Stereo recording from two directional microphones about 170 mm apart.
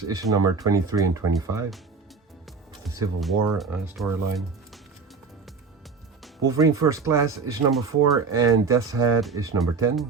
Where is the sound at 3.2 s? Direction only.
Centre (ahead or behind).